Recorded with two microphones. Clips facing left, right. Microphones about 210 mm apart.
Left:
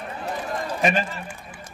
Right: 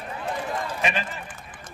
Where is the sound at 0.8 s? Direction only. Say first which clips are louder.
Left 8 dB; 45° left (ahead or behind).